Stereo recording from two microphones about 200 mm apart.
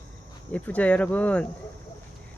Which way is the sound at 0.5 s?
5° left (ahead or behind).